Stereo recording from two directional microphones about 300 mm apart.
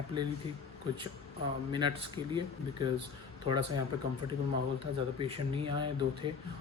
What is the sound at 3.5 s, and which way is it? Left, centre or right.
Speech, centre.